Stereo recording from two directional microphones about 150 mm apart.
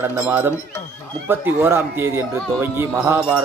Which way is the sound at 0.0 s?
15° right (ahead or behind).